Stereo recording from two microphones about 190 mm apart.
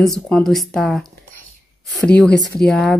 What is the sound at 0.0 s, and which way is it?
Speech, centre (ahead or behind).